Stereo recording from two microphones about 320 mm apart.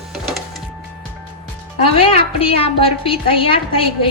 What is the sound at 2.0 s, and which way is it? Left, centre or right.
A woman's voice, centre.